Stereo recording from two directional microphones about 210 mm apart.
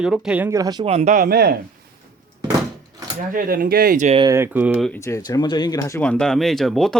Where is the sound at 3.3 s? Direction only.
45° right (ahead or behind).